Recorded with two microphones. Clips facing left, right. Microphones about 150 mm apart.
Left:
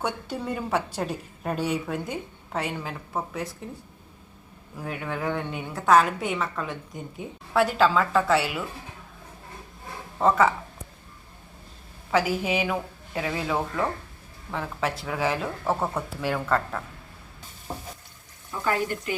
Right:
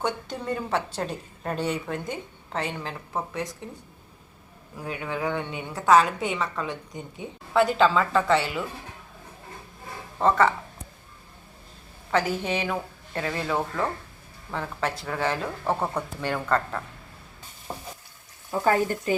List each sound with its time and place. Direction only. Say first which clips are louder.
0.0 s a woman's voice: even; 10° left (ahead or behind)
4.8 s a woman's voice: right 1 dB; centre (ahead or behind)
10.2 s a woman's voice: even; 5° left (ahead or behind)
12.1 s a woman's voice: left 1 dB; 5° left (ahead or behind)
18.6 s speech: right 3 dB; 40° right (ahead or behind)